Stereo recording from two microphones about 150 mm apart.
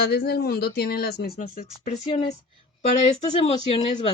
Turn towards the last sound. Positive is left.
turn(degrees=40)  # may be behind; listen again after turning